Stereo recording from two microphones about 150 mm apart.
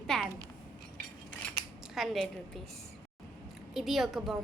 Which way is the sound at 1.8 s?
Centre (ahead or behind).